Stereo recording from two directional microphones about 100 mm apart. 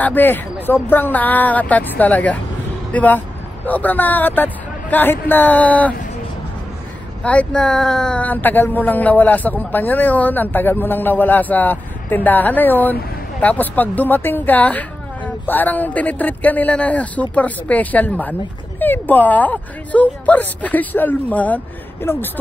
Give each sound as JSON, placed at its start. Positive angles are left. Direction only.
{"t": 0.0, "sound": "speech", "side_deg": 20}
{"t": 7.2, "sound": "speech", "side_deg": 10}